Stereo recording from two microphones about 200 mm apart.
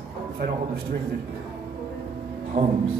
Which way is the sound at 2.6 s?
30° right (ahead or behind).